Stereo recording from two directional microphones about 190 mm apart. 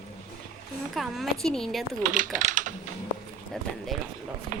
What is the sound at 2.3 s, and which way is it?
Typing, 40° right (ahead or behind).